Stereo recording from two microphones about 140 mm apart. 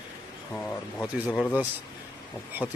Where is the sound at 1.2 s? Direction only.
10° right (ahead or behind).